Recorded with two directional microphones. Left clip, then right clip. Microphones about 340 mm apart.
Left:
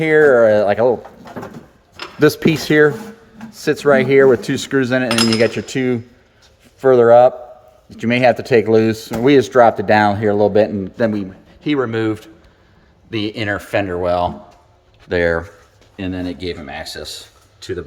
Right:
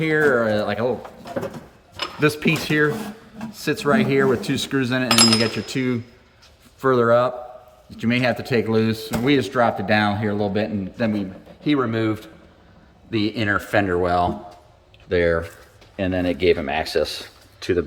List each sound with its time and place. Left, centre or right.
0.0 s speech: centre
2.1 s speech: centre